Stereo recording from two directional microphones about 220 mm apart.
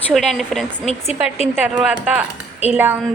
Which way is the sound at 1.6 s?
5° right (ahead or behind).